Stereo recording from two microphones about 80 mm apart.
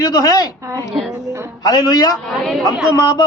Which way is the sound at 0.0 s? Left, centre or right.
Left.